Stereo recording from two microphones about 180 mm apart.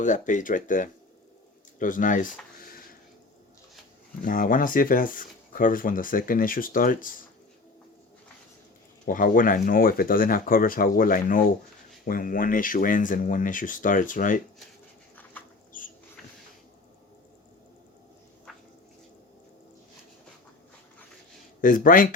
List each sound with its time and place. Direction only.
0.0 s speech: 45° left (ahead or behind)
4.2 s speech: 50° left (ahead or behind)
9.0 s speech: 50° left (ahead or behind)
15.1 s bird: 10° left (ahead or behind)
21.6 s speech: 50° left (ahead or behind)